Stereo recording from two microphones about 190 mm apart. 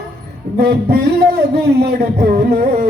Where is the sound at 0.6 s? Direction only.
55° right (ahead or behind).